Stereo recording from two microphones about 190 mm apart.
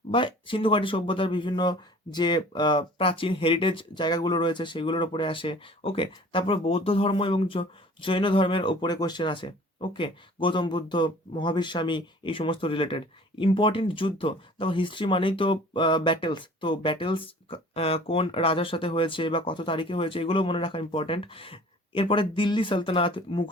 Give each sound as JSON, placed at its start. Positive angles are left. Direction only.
{"t": 0.1, "sound": "speech", "side_deg": 25}